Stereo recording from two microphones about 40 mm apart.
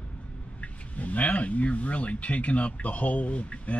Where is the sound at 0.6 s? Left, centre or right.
Left.